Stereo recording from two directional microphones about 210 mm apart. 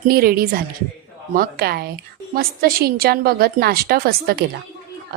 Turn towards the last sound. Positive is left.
turn(degrees=-50)  # may be behind; listen again after turning